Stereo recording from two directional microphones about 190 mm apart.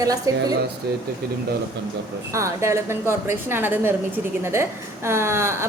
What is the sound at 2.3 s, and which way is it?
A woman's voice, 15° right (ahead or behind).